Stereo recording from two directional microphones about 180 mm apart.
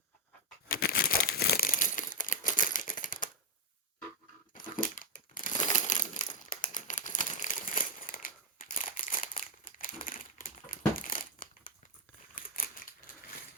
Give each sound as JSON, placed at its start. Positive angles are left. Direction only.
{"t": 0.7, "sound": "crumpling", "side_deg": 55}
{"t": 4.5, "sound": "crumpling", "side_deg": 50}